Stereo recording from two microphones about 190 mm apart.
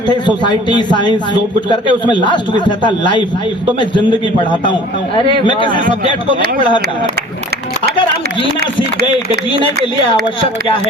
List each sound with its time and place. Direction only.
0.1 s a man's voice: 25° left (ahead or behind)
4.6 s a man's voice: 25° left (ahead or behind)